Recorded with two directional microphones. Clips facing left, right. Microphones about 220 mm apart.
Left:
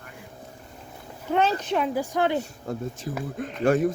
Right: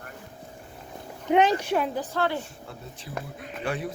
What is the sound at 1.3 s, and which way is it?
Speech, 15° right (ahead or behind).